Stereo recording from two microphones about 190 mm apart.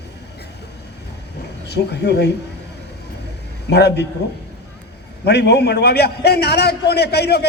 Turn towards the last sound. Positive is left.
turn(degrees=60)  # may be behind; listen again after turning